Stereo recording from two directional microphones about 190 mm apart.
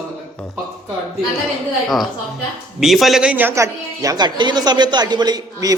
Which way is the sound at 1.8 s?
Centre (ahead or behind).